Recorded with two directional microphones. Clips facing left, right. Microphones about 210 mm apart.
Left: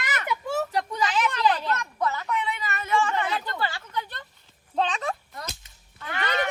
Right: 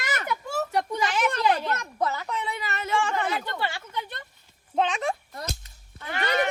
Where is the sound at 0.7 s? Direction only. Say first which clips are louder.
Right 1 dB; 25° right (ahead or behind).